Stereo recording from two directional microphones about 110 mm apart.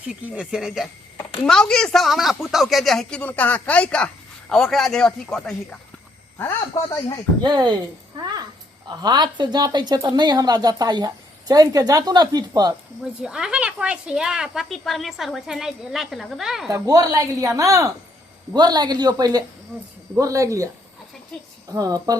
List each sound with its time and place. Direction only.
0.3 s speech: 5° right (ahead or behind)
7.4 s speech: 40° right (ahead or behind)
8.2 s a sound: 35° right (ahead or behind)
8.9 s speech: 40° right (ahead or behind)
13.2 s speech: 5° right (ahead or behind)
16.7 s speech: 35° right (ahead or behind)
21.7 s speech: 35° right (ahead or behind)